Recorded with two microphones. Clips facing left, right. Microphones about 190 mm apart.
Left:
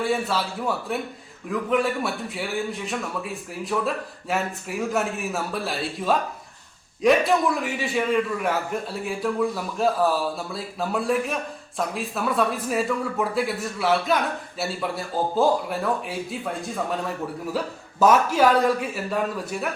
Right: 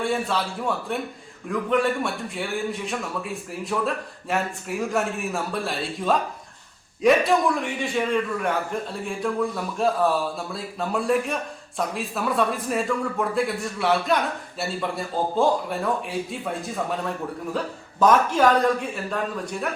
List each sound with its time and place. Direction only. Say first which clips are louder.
0.0 s a man's voice: even; 5° left (ahead or behind)